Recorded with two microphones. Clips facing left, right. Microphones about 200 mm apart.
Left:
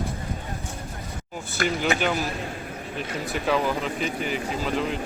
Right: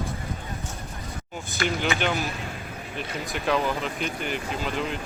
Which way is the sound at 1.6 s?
45° left (ahead or behind).